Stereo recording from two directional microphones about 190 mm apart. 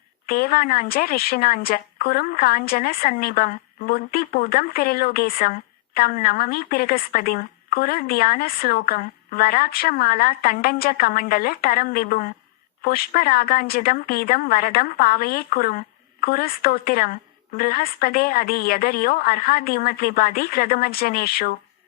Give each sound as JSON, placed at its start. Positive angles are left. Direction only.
{"t": 0.3, "sound": "a woman's voice", "side_deg": 50}